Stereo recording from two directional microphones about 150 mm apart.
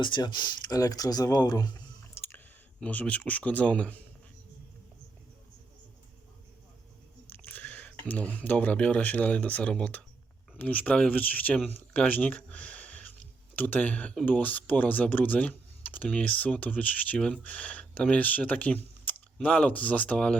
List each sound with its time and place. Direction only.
0.0 s speech: 30° left (ahead or behind)
2.1 s a sound: 15° left (ahead or behind)
2.8 s speech: 10° left (ahead or behind)
7.3 s speech: 10° left (ahead or behind)